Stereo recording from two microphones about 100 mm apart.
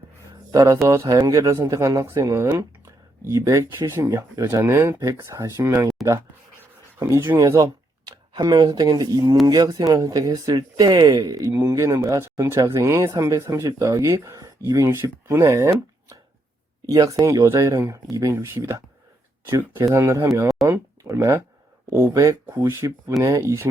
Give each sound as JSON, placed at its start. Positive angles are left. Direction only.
{"t": 0.5, "sound": "speech", "side_deg": -35}
{"t": 7.3, "sound": "speech", "side_deg": -35}